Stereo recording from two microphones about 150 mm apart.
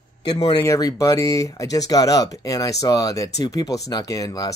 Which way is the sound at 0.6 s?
20° left (ahead or behind).